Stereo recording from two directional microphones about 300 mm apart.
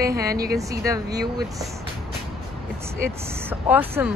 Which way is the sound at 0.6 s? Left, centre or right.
Centre.